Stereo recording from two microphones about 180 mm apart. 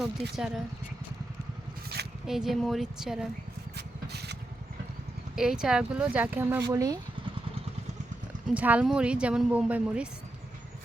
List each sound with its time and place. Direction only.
0.0 s a woman's voice: centre (ahead or behind)
2.2 s a woman's voice: centre (ahead or behind)
3.8 s rub: 65° right (ahead or behind)
5.4 s speech: 5° right (ahead or behind); by 7.0 s 20° right (ahead or behind)
8.5 s a woman's voice: 5° right (ahead or behind)